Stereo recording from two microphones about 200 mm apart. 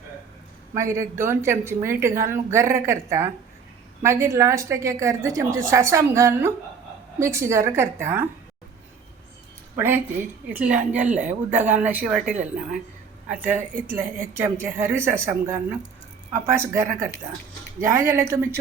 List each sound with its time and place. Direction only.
0.7 s speech: 15° right (ahead or behind)
9.7 s speech: 10° right (ahead or behind)
12.1 s speech: 40° right (ahead or behind)
13.2 s speech: 5° right (ahead or behind)